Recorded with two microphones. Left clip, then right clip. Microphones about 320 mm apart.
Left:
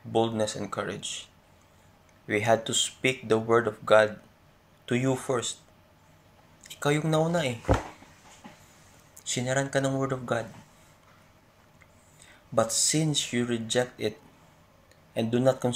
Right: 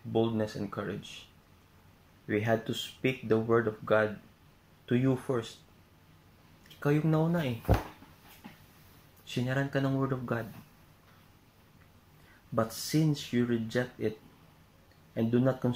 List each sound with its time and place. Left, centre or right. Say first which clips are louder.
0.1 s speech: left 4 dB; left
2.2 s speech: left 6 dB; left
6.8 s speech: left 4 dB; left
9.3 s speech: left 5 dB; left
12.8 s speech: left 4 dB; left
15.1 s speech: left 5 dB; left